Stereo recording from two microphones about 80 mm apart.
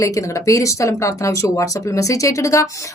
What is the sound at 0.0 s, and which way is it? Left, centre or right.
Speech, left.